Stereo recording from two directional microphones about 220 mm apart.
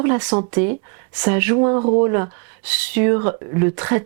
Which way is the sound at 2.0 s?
15° right (ahead or behind).